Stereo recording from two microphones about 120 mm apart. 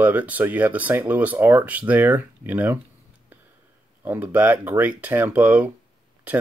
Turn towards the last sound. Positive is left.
turn(degrees=-15)  # may be behind; listen again after turning